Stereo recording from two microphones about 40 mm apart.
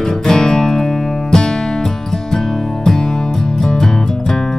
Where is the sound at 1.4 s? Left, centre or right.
Centre.